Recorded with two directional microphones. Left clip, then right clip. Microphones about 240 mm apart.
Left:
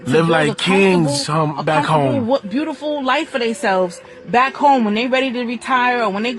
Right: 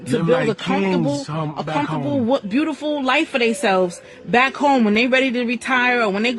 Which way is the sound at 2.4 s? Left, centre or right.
Right.